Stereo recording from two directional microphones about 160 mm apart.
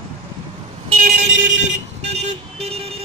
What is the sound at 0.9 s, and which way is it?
Vehicle, 55° right (ahead or behind).